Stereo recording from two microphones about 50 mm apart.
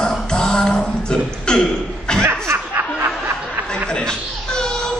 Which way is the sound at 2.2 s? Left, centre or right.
Right.